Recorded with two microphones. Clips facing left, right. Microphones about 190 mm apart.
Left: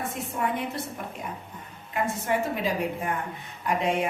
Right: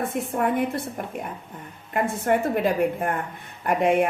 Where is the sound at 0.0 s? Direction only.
55° right (ahead or behind).